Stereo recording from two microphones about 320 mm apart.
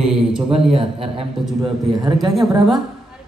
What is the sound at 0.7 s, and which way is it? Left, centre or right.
A man's voice, centre.